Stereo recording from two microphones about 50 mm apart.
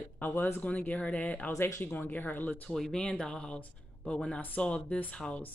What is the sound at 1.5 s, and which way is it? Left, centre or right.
Speech, left.